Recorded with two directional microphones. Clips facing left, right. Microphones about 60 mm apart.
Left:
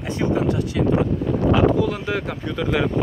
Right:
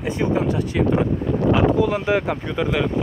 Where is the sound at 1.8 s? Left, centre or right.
Right.